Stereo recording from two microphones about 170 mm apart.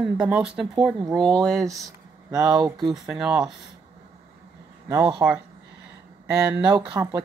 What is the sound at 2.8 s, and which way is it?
Speech, 5° right (ahead or behind).